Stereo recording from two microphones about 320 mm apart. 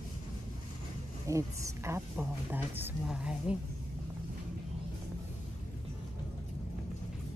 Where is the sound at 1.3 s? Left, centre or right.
Centre.